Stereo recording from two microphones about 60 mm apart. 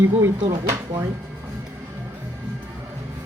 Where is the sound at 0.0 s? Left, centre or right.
Right.